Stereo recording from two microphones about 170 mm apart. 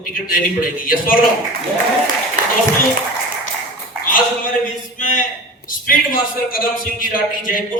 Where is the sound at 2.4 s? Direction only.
50° right (ahead or behind).